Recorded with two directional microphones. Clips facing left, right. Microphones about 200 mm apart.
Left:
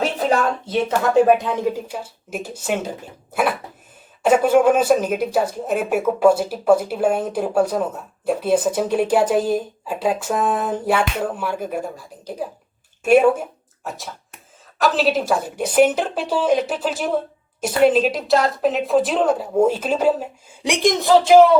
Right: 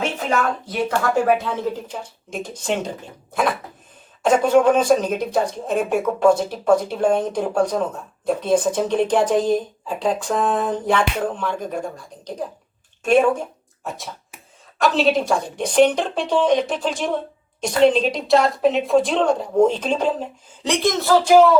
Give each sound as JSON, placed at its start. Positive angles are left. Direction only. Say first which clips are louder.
{"t": 0.0, "sound": "speech", "louder": "left 3 dB", "side_deg": 35}